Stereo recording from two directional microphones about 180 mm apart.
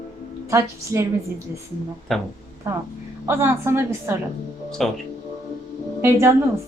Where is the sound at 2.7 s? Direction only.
15° right (ahead or behind).